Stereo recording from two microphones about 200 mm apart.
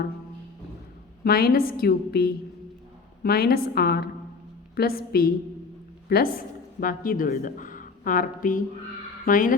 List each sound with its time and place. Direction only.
1.2 s a woman's voice: 50° left (ahead or behind)